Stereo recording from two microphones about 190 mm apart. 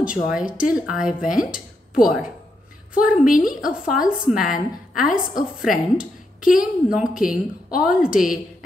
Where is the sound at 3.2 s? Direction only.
45° left (ahead or behind).